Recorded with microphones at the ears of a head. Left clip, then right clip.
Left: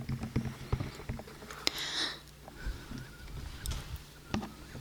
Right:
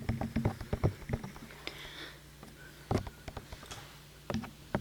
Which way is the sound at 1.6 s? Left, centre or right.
Left.